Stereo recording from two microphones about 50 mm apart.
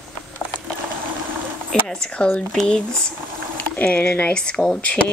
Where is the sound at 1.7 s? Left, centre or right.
Centre.